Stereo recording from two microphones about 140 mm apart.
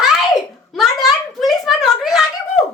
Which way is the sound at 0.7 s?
Centre (ahead or behind).